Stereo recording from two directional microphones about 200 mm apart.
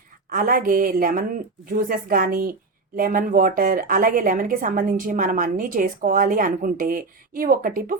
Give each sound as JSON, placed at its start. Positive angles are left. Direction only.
{"t": 0.3, "sound": "a woman's voice", "side_deg": -45}